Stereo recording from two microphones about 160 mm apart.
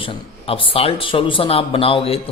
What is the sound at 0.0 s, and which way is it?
A man's voice, 35° left (ahead or behind).